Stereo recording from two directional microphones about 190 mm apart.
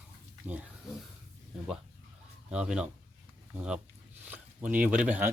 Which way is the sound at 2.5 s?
5° right (ahead or behind).